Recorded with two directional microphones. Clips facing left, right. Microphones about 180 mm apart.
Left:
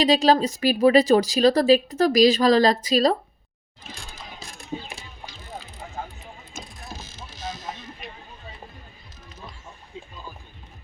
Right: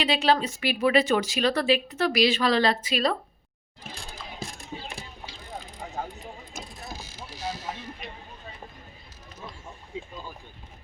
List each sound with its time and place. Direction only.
0.0 s a woman's voice: 40° left (ahead or behind)
3.9 s music: 50° right (ahead or behind)
6.9 s mechanisms: 10° right (ahead or behind)